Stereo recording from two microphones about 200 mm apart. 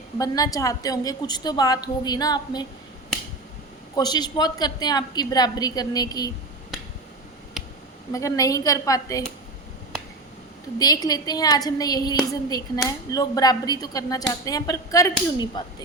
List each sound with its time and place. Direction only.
0.2 s a woman's voice: 20° left (ahead or behind)
3.9 s a woman's voice: 20° left (ahead or behind)
8.1 s a woman's voice: 15° left (ahead or behind)
10.8 s a woman's voice: 20° left (ahead or behind)